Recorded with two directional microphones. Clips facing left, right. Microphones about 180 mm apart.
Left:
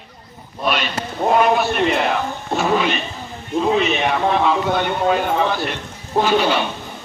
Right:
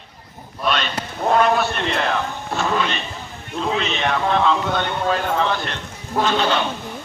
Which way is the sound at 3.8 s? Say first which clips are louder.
Left 4 dB; 10° left (ahead or behind).